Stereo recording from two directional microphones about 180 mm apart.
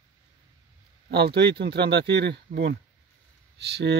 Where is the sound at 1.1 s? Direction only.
65° right (ahead or behind).